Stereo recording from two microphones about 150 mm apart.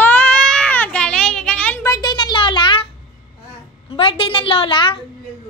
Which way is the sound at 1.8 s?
25° left (ahead or behind).